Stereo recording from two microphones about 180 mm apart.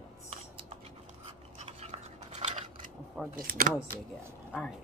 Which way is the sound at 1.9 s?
40° right (ahead or behind).